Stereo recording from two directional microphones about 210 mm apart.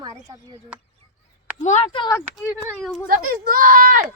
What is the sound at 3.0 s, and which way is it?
A child's voice, 40° right (ahead or behind).